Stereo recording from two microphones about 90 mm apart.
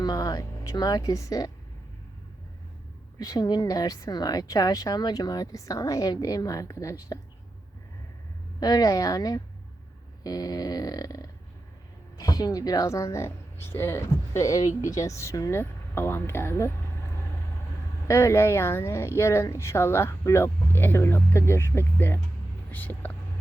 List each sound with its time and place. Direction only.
0.0 s speech: 45° left (ahead or behind)
3.2 s a woman's voice: 45° left (ahead or behind)
8.6 s a woman's voice: 45° left (ahead or behind); by 17.1 s 30° left (ahead or behind)
18.1 s speech: 30° left (ahead or behind)